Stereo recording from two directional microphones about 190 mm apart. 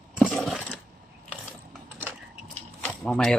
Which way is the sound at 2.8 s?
5° left (ahead or behind).